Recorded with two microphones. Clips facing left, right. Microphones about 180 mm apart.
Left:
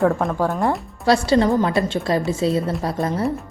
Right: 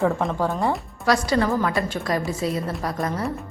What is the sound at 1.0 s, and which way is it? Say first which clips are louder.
A woman's voice: left 4 dB; 30° left (ahead or behind).